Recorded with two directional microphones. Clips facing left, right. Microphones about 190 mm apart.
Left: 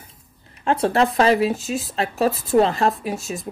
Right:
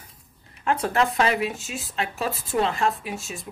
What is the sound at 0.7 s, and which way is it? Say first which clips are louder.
Speech: left 4 dB; 30° left (ahead or behind).